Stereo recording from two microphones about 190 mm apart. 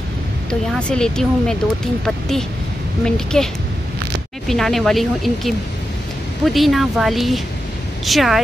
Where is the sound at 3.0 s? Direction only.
5° left (ahead or behind).